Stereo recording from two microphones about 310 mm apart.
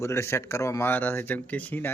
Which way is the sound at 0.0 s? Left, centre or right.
Centre.